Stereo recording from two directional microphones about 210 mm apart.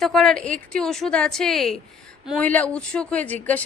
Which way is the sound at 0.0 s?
5° left (ahead or behind).